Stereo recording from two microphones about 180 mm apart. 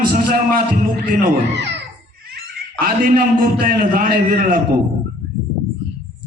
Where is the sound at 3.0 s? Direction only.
50° right (ahead or behind).